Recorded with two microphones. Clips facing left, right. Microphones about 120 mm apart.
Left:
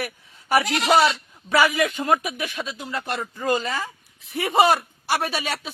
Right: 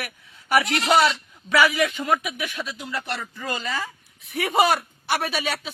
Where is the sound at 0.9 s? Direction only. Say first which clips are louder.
Left 1 dB; centre (ahead or behind).